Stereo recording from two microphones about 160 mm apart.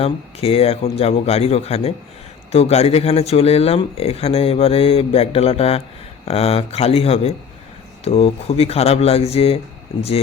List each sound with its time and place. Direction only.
0.0 s speech: 40° left (ahead or behind)